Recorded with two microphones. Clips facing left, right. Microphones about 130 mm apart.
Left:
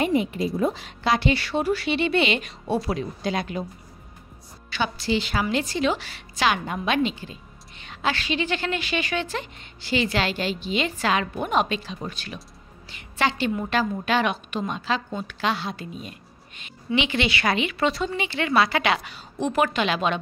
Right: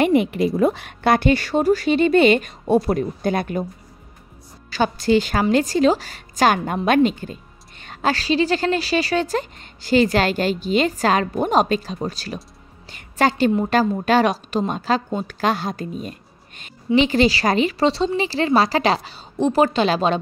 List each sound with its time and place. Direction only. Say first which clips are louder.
0.0 s a woman's voice: right 6 dB; 70° right (ahead or behind); by 3.6 s 50° right (ahead or behind)
4.6 s a woman's voice: right 7 dB; 40° right (ahead or behind)